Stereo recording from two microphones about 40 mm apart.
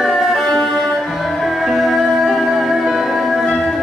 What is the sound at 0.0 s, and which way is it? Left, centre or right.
Music, centre.